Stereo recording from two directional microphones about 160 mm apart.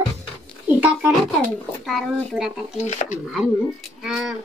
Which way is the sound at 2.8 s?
45° left (ahead or behind).